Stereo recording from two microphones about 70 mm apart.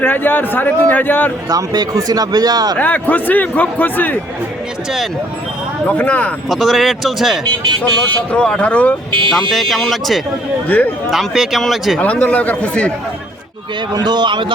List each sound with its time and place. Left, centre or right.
0.0 s a man's voice: left
1.5 s speech: right
2.7 s a man's voice: left
6.0 s a man's voice: left
6.5 s speech: centre
7.8 s a man's voice: left
9.3 s speech: centre
10.7 s a man's voice: left
11.1 s speech: centre
11.9 s a man's voice: centre
13.9 s a man's voice: right